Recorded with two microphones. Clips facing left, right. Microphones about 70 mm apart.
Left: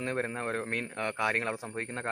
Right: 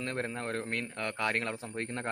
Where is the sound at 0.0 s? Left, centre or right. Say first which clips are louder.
Left 3 dB; centre.